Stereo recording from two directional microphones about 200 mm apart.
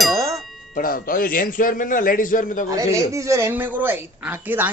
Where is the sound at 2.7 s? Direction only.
15° right (ahead or behind).